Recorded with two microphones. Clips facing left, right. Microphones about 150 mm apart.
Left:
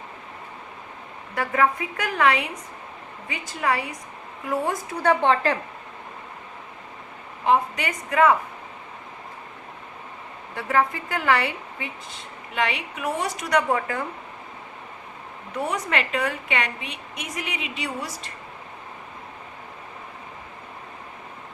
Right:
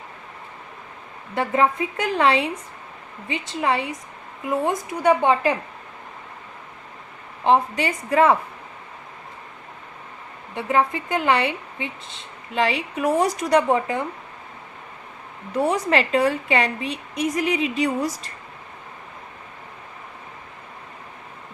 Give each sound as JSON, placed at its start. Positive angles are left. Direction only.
{"t": 1.4, "sound": "a woman's voice", "side_deg": -25}
{"t": 7.4, "sound": "a woman's voice", "side_deg": -30}
{"t": 10.5, "sound": "speech", "side_deg": -20}
{"t": 15.5, "sound": "a woman's voice", "side_deg": -35}